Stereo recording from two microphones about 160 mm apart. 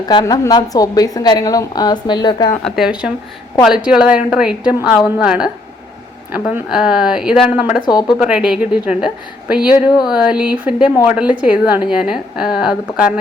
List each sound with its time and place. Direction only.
0.1 s a woman's voice: 25° left (ahead or behind)
2.6 s a woman's voice: centre (ahead or behind)
7.9 s a woman's voice: 25° left (ahead or behind)
8.2 s a woman's voice: 5° right (ahead or behind)